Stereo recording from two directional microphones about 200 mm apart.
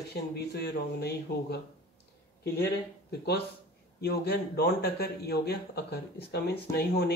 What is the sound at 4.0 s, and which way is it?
Speech, 50° left (ahead or behind).